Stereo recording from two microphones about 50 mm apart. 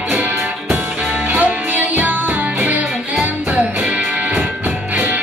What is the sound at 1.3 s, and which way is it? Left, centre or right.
Music, right.